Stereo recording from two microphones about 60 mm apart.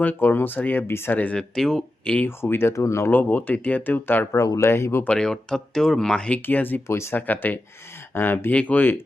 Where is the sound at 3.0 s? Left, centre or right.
Left.